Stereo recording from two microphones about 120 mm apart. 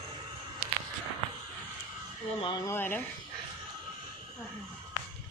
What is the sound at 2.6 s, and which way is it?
Speech, 20° left (ahead or behind).